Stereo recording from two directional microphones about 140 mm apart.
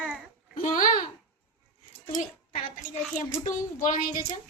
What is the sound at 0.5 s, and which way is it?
Child singing, 70° left (ahead or behind).